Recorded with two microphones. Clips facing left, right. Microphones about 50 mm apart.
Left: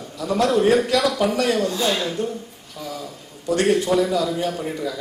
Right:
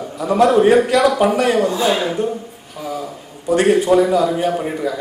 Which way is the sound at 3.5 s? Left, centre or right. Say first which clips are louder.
Right 5 dB; right.